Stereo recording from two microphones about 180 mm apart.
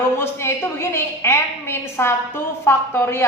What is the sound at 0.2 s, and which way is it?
A woman's voice, 15° left (ahead or behind).